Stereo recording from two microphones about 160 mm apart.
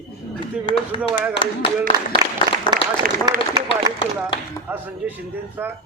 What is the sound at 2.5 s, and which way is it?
Applause, 25° right (ahead or behind).